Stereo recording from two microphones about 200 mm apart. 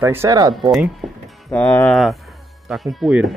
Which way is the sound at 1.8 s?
Centre (ahead or behind).